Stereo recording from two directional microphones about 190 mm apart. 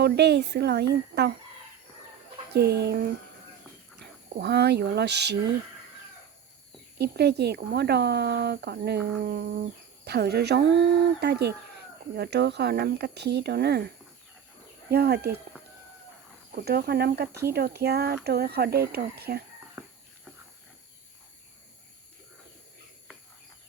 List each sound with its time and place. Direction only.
0.0 s speech: 60° right (ahead or behind)
2.5 s speech: 60° right (ahead or behind)
4.4 s speech: 60° right (ahead or behind)
7.0 s speech: 60° right (ahead or behind)
16.5 s speech: 55° right (ahead or behind)